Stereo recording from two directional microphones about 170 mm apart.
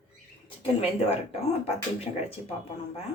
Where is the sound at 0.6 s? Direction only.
35° left (ahead or behind).